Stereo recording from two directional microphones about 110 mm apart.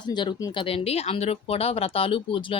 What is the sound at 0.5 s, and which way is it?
Speech, 60° left (ahead or behind).